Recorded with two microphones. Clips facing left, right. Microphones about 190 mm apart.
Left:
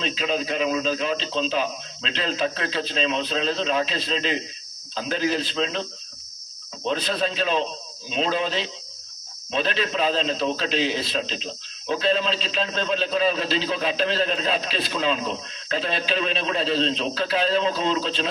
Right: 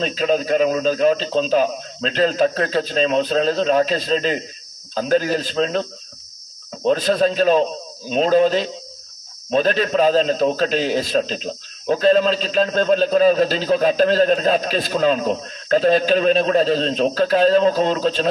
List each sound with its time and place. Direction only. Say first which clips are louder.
0.0 s a man's voice: right 7 dB; 45° right (ahead or behind)